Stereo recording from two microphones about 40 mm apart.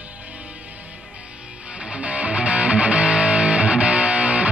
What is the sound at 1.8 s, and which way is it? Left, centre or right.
Music, right.